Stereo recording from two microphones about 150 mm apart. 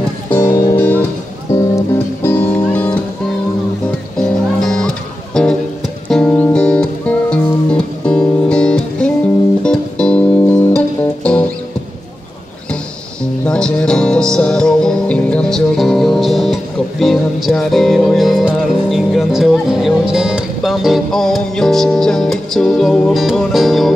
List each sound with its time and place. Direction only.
0.4 s music: 20° left (ahead or behind)
2.2 s music: 10° left (ahead or behind)
4.2 s music: 5° left (ahead or behind)
13.2 s music: 5° left (ahead or behind)